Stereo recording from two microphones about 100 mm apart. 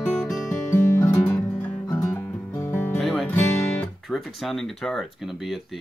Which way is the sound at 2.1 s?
15° left (ahead or behind).